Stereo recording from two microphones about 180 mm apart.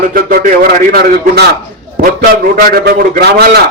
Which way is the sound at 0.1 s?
55° right (ahead or behind).